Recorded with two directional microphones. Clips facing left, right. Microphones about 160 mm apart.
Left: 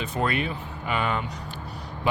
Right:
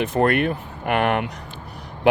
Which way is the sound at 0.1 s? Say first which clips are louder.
Right 5 dB; 60° right (ahead or behind).